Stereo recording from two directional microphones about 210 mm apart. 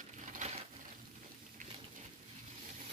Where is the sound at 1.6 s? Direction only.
40° right (ahead or behind).